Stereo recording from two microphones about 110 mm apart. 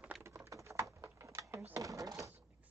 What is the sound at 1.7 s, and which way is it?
Drawer open or close, 30° right (ahead or behind).